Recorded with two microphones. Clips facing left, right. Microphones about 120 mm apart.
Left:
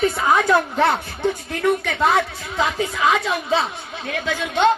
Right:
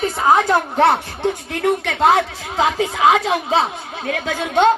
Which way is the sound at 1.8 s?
80° right.